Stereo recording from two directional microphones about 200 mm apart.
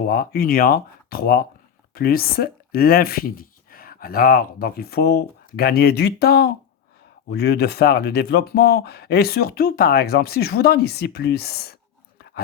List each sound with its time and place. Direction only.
0.0 s speech: 50° left (ahead or behind)